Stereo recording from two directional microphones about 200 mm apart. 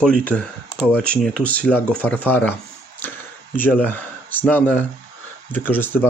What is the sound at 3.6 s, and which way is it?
Speech, 10° left (ahead or behind).